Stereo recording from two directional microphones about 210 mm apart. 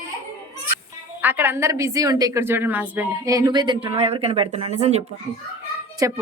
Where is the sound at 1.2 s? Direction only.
10° right (ahead or behind); by 5.0 s 30° right (ahead or behind).